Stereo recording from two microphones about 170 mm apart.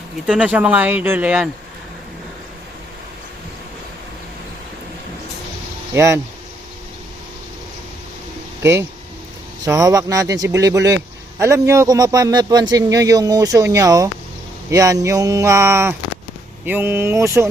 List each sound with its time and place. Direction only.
0.3 s speech: 5° right (ahead or behind)
5.9 s speech: 15° right (ahead or behind)
9.6 s a man's voice: 20° right (ahead or behind)